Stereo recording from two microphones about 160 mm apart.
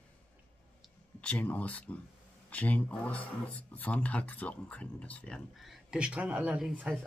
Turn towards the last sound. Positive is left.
turn(degrees=-5)  # may be behind; listen again after turning